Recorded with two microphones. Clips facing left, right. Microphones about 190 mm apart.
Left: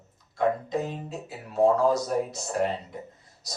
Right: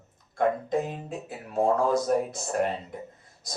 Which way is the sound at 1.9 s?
50° right (ahead or behind).